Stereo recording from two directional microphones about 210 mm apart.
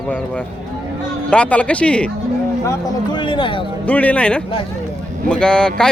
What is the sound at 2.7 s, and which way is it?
Speech, 20° left (ahead or behind).